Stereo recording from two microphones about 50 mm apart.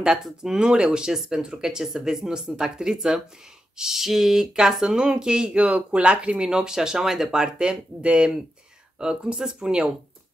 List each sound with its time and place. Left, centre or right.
0.0 s speech: centre
7.5 s speech: right